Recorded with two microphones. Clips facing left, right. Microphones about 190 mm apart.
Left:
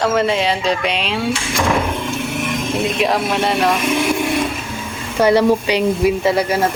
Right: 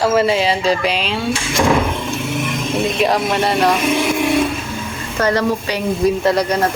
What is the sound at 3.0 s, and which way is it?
Speech, centre (ahead or behind).